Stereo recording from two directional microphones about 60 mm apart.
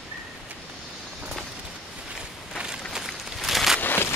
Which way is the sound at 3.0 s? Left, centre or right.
Centre.